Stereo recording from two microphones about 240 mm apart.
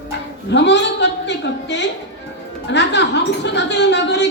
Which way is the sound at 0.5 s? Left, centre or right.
Left.